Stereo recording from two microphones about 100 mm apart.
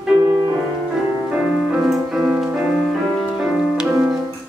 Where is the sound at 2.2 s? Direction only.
15° right (ahead or behind).